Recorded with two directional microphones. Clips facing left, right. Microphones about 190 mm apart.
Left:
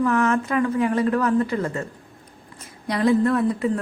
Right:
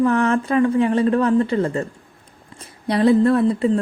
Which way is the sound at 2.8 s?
30° right (ahead or behind).